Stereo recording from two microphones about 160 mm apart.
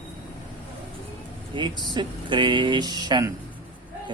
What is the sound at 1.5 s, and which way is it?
Speech, 30° right (ahead or behind).